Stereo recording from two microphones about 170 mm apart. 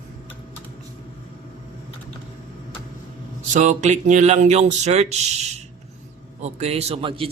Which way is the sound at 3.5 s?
45° right (ahead or behind).